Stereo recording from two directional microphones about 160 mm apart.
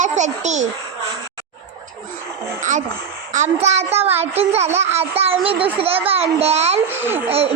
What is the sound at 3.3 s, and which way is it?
A child's voice, 45° right (ahead or behind).